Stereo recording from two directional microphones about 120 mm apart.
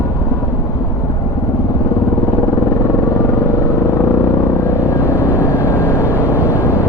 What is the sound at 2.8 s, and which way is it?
Vehicle, 25° left (ahead or behind).